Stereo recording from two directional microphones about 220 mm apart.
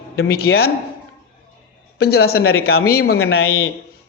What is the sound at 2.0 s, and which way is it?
A man's voice, 45° left (ahead or behind).